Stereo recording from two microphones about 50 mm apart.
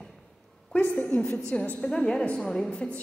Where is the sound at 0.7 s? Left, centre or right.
Left.